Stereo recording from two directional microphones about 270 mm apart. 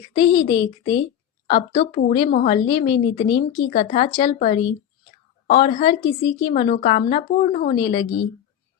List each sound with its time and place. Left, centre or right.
0.3 s a woman's voice: centre
1.5 s a woman's voice: left
7.8 s a woman's voice: centre